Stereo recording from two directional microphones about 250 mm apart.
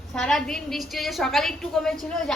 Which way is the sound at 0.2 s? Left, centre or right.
Centre.